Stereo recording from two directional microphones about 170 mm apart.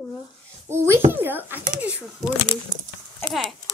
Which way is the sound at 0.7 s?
15° right (ahead or behind).